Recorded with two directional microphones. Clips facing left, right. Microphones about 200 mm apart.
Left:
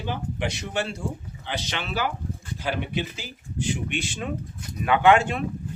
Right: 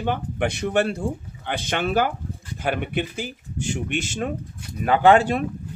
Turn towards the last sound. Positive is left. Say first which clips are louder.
# right 3 dB
turn(degrees=-35)  # may be behind; listen again after turning